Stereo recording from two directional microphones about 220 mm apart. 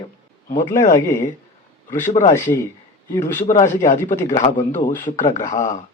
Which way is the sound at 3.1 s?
15° left (ahead or behind).